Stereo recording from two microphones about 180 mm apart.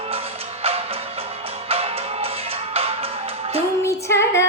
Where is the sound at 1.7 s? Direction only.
35° right (ahead or behind).